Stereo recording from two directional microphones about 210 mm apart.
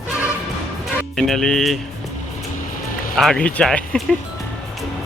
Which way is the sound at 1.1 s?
Centre (ahead or behind).